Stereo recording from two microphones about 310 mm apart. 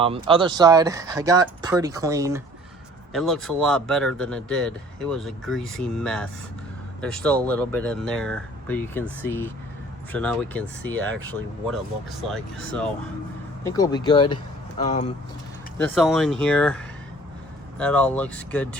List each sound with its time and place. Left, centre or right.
0.0 s speech: centre
3.1 s speech: centre
12.3 s speech: centre
15.8 s speech: centre